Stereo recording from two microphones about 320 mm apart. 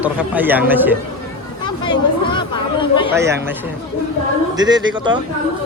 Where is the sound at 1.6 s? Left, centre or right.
Centre.